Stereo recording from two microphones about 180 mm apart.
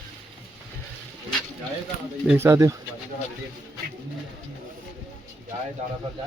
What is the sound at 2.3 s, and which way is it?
Speech, 15° right (ahead or behind).